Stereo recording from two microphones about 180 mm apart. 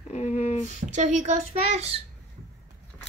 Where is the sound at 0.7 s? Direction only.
40° right (ahead or behind).